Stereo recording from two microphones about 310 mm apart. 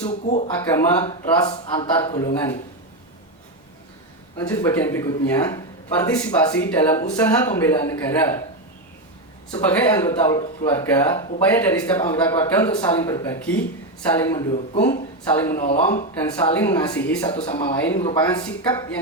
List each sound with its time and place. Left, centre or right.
0.1 s speech: left
0.7 s speech: centre
4.4 s speech: centre
9.5 s speech: centre
17.3 s speech: centre